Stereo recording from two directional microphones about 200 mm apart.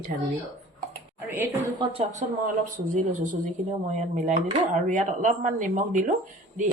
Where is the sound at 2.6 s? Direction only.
40° right (ahead or behind).